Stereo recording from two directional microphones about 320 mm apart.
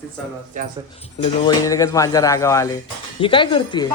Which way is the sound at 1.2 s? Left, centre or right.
Centre.